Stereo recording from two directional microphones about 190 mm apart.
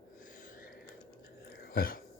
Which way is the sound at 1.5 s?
50° left (ahead or behind).